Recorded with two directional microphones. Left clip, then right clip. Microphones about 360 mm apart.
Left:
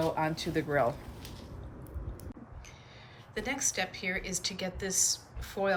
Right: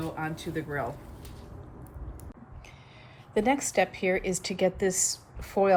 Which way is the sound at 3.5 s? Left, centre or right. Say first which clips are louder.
Right 6 dB; centre.